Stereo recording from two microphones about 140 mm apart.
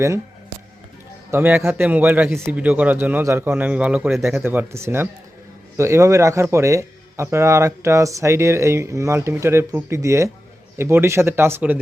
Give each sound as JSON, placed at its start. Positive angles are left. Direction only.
{"t": 1.3, "sound": "a man's voice", "side_deg": -15}